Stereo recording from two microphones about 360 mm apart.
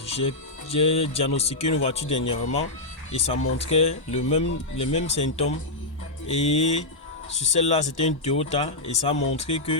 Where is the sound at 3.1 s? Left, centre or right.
Centre.